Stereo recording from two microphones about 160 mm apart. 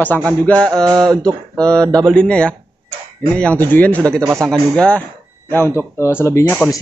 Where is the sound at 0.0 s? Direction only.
10° left (ahead or behind).